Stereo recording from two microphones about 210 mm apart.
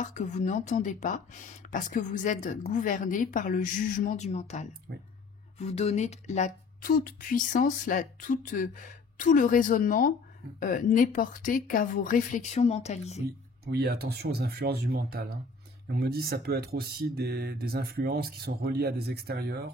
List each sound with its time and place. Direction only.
0.0 s speech: 35° left (ahead or behind)
13.7 s speech: 50° right (ahead or behind)